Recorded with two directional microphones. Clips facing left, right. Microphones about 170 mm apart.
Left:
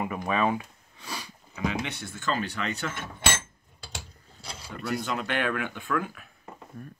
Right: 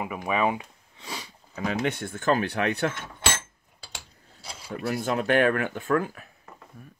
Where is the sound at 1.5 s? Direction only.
40° right (ahead or behind); by 2.9 s 60° right (ahead or behind).